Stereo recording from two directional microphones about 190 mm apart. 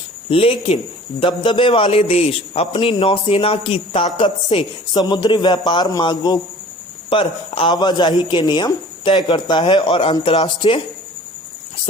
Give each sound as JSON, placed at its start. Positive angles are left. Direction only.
{"t": 0.3, "sound": "a man's voice", "side_deg": 30}